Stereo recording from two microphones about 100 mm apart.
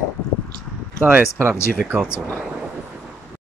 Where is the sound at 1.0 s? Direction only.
20° right (ahead or behind).